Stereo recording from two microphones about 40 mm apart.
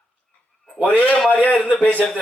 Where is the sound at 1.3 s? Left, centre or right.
Left.